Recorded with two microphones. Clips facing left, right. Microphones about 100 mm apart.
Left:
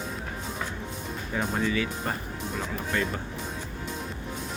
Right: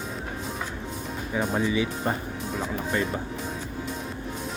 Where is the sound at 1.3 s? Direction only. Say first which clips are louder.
Right 2 dB; 5° right (ahead or behind).